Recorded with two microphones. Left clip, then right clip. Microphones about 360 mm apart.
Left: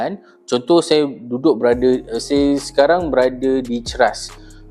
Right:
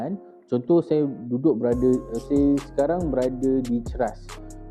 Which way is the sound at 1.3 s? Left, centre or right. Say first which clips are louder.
Left 6 dB; centre.